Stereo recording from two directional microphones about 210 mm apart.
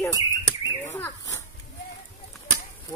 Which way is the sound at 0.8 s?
10° left (ahead or behind).